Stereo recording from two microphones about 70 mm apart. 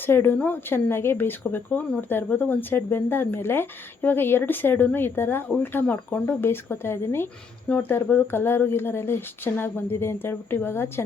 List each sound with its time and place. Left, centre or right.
0.0 s speech: left